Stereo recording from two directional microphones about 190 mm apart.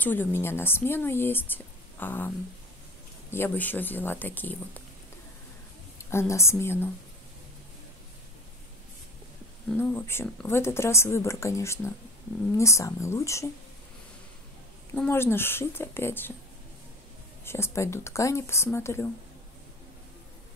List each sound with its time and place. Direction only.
0.0 s speech: 10° left (ahead or behind)
6.0 s speech: 15° left (ahead or behind)
9.7 s speech: 10° left (ahead or behind)
15.0 s speech: 10° left (ahead or behind)
17.5 s speech: 15° left (ahead or behind)